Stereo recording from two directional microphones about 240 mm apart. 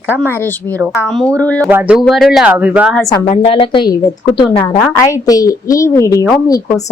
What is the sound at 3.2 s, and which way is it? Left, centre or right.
A woman's voice, left.